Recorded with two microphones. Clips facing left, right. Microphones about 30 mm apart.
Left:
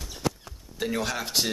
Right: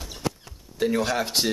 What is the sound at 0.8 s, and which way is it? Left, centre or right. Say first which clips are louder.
Speech: right 5 dB; centre.